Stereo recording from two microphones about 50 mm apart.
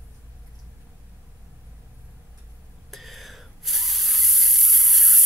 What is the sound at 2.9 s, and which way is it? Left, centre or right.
Spray, centre.